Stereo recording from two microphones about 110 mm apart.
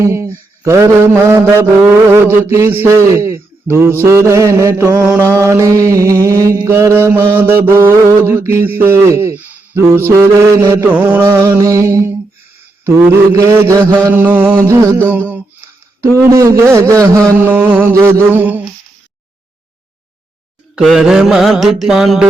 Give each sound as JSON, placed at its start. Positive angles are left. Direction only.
{"t": 0.0, "sound": "mantra", "side_deg": -25}
{"t": 4.9, "sound": "mantra", "side_deg": -10}
{"t": 5.2, "sound": "mantra", "side_deg": -25}
{"t": 10.8, "sound": "mantra", "side_deg": -10}
{"t": 11.5, "sound": "mantra", "side_deg": -30}
{"t": 17.7, "sound": "mantra", "side_deg": -20}
{"t": 20.7, "sound": "mantra", "side_deg": -5}